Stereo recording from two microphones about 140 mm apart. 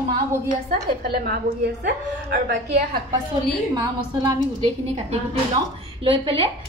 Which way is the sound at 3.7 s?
30° right (ahead or behind).